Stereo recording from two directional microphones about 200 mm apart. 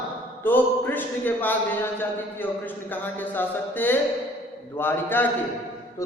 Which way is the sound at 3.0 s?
10° left (ahead or behind).